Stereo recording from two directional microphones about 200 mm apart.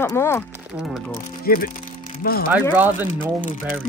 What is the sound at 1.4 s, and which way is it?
Speech, 45° left (ahead or behind).